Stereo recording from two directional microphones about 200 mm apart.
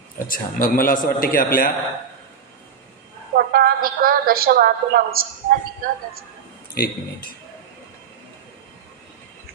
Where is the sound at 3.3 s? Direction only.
50° right (ahead or behind).